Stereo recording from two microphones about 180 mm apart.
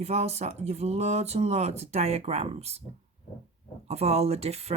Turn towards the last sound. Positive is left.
turn(degrees=-35)  # may be behind; listen again after turning